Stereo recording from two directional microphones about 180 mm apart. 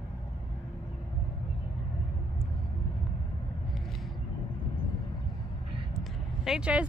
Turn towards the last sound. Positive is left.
turn(degrees=-5)  # may be behind; listen again after turning